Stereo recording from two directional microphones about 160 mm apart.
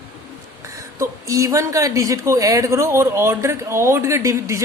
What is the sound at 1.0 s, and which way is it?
Speech, 20° right (ahead or behind).